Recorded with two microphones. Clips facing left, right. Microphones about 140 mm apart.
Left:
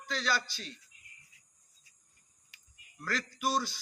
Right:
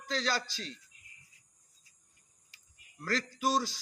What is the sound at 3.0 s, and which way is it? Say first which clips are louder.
Music: right 2 dB; 35° right (ahead or behind).